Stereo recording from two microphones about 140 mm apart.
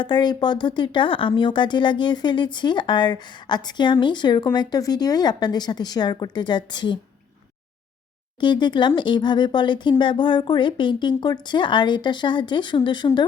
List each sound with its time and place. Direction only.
0.0 s speech: 30° left (ahead or behind)
8.4 s speech: 35° left (ahead or behind)